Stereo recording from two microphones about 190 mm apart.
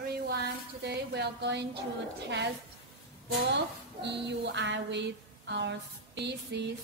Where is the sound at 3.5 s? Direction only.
65° right (ahead or behind).